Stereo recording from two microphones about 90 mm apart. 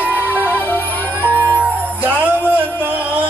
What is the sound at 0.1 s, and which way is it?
Music, 15° left (ahead or behind).